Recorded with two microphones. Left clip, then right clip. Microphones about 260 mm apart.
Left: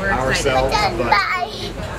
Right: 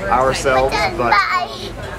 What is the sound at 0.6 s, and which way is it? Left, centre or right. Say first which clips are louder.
Speech: right 1 dB; centre.